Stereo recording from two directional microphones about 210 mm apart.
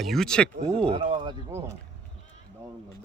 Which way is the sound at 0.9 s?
25° right (ahead or behind).